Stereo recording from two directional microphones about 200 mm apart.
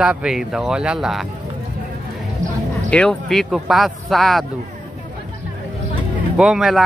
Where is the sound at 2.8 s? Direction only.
5° left (ahead or behind).